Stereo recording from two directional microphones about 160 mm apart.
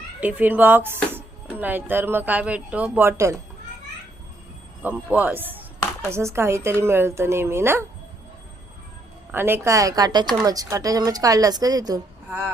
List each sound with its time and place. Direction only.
0.2 s speech: 10° right (ahead or behind)
4.8 s speech: 10° right (ahead or behind)
9.3 s speech: 15° right (ahead or behind)